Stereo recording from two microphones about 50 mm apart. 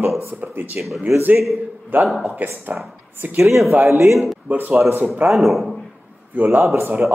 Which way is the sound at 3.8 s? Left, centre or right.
Right.